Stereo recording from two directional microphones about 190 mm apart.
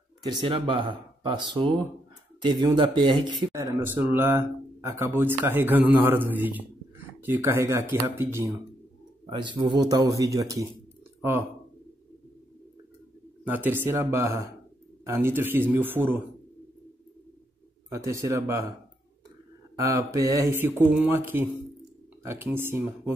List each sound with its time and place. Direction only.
0.2 s speech: 25° right (ahead or behind)
9.2 s speech: 25° right (ahead or behind)
13.7 s speech: 15° right (ahead or behind)
17.9 s speech: 15° right (ahead or behind)
19.8 s speech: 15° right (ahead or behind)